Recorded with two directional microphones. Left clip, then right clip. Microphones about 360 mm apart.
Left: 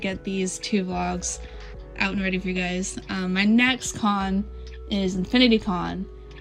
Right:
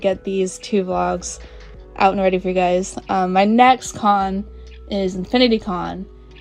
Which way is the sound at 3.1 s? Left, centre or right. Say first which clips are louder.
Right 11 dB; centre.